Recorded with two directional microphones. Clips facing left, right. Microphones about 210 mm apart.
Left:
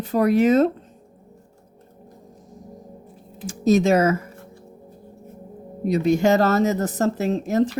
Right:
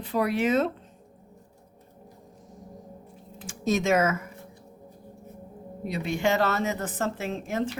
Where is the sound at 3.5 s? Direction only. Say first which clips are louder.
Left 7 dB; 35° left (ahead or behind).